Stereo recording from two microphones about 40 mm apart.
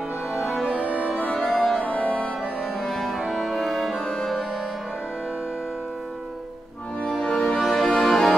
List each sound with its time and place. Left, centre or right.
0.3 s music: centre
1.2 s music: centre
2.0 s music: left
2.8 s music: centre
7.2 s music: centre
7.4 s music: centre